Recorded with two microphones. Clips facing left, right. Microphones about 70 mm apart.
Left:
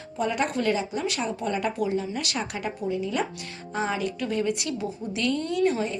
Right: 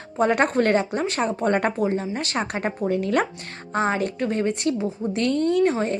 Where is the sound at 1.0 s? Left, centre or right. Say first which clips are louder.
Right 5 dB; right.